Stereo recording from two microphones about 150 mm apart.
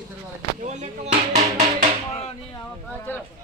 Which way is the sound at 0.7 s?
50° right (ahead or behind).